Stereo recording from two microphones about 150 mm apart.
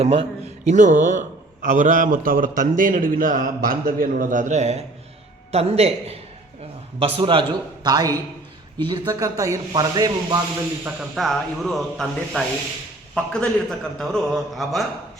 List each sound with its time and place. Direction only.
0.0 s a man's voice: 40° right (ahead or behind)
7.9 s speech: 25° right (ahead or behind)
10.8 s a man's voice: centre (ahead or behind)